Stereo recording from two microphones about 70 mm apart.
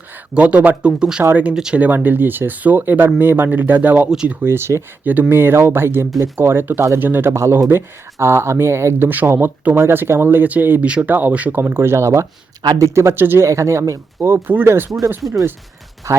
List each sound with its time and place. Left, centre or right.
0.3 s speech: centre
1.2 s speech: right
1.5 s speech: centre
1.8 s speech: right
4.1 s speech: centre
4.4 s speech: right
11.6 s speech: right
13.4 s speech: right
16.1 s speech: right